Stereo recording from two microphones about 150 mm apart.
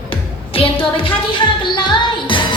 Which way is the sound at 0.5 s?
35° left (ahead or behind).